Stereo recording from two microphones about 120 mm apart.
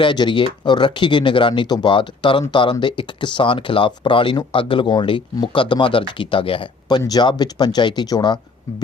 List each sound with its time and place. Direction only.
0.0 s speech: 40° left (ahead or behind)